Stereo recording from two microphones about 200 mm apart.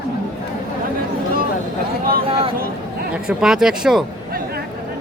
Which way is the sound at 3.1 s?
5° right (ahead or behind).